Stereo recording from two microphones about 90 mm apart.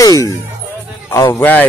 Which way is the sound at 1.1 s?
35° left (ahead or behind).